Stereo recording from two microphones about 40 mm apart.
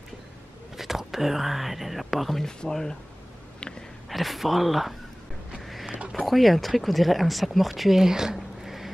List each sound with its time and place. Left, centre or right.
0.7 s speech: centre
2.4 s speech: centre
4.1 s speech: centre
5.9 s a sound: right
6.2 s speech: centre
8.0 s a sound: centre